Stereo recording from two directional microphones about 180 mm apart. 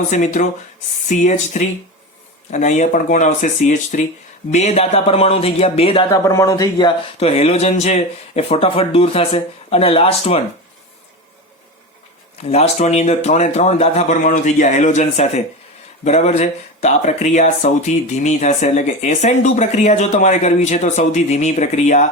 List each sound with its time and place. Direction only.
0.1 s speech: 45° left (ahead or behind)
6.2 s speech: 15° left (ahead or behind); by 10.4 s 35° left (ahead or behind)
12.4 s speech: 35° left (ahead or behind)